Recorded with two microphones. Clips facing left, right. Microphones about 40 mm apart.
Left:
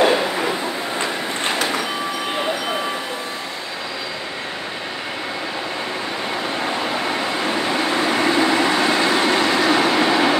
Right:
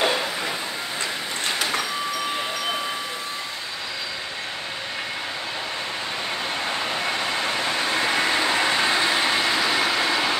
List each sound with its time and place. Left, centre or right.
0.0 s a sound: left
0.9 s vehicle: left
7.7 s vehicle: left
9.4 s train: left